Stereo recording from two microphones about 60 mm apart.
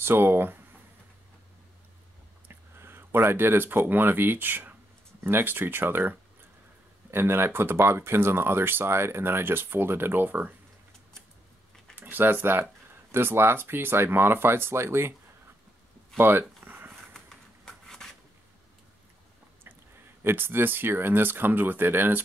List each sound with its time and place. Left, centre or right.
0.0 s speech: right
2.4 s speech: right
11.9 s speech: right
16.2 s a sound: right
17.6 s a sound: centre
20.2 s speech: right